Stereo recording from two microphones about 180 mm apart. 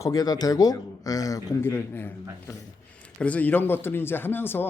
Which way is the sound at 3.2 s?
10° left (ahead or behind).